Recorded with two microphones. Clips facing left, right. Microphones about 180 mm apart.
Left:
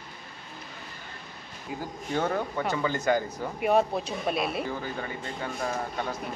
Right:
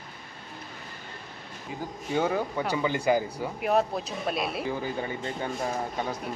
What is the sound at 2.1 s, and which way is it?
Speech, 5° right (ahead or behind).